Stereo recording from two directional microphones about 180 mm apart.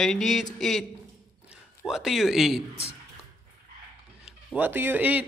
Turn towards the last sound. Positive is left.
turn(degrees=-10)  # may be behind; listen again after turning